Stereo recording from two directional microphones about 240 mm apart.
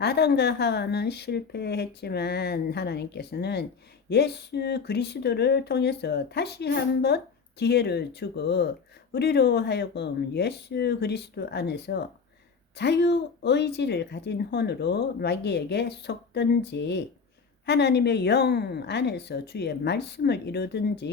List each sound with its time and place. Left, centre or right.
0.0 s a woman's voice: left